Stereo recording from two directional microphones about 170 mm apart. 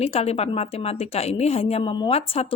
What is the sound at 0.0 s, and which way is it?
A woman's voice, 35° left (ahead or behind).